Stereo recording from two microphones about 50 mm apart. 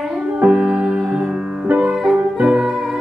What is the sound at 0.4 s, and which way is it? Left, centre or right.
Music, centre.